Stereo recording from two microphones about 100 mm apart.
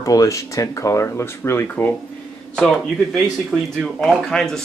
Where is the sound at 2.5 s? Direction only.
5° left (ahead or behind).